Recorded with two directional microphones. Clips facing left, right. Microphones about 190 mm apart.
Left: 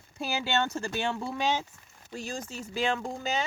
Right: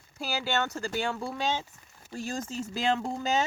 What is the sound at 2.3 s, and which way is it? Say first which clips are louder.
Speech: right 5 dB; 45° right (ahead or behind).